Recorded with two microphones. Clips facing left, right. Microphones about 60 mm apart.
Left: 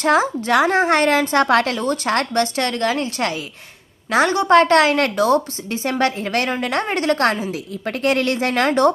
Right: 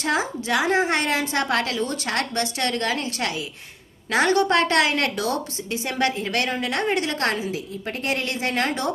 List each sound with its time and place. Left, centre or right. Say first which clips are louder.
0.0 s a woman's voice: left 7 dB; left
7.5 s speech: left 4 dB; left